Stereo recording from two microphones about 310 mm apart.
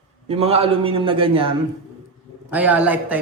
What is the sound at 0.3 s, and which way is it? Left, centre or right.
A man's voice, centre.